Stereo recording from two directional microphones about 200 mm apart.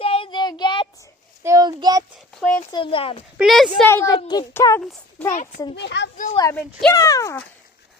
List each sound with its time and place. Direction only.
0.0 s child singing: 30° left (ahead or behind)
1.5 s a child's voice: 20° right (ahead or behind)
2.4 s a woman's voice: 5° left (ahead or behind)
2.7 s speech: 25° left (ahead or behind)
3.3 s a woman's voice: centre (ahead or behind)
3.8 s a child's voice: 15° left (ahead or behind)
5.3 s a child's voice: 40° left (ahead or behind)
5.7 s a child's voice: 60° left (ahead or behind)
6.3 s a child's voice: 15° left (ahead or behind)